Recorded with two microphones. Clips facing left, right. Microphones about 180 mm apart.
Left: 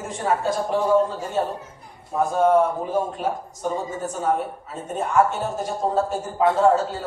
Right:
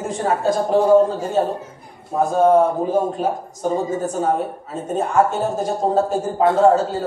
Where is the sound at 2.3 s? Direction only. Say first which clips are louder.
Right 4 dB; 35° right (ahead or behind).